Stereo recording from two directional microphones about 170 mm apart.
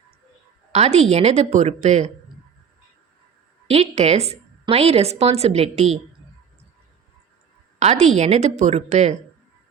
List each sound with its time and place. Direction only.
0.7 s a woman's voice: 40° right (ahead or behind)
3.7 s a woman's voice: 40° right (ahead or behind)
7.8 s a woman's voice: 40° right (ahead or behind)